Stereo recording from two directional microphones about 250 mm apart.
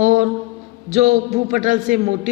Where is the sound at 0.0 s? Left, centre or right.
Right.